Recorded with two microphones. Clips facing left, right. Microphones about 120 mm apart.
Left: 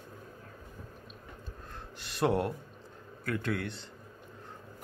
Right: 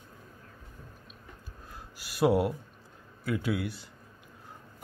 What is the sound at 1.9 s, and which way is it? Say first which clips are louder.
Speech: right 4 dB; 5° right (ahead or behind).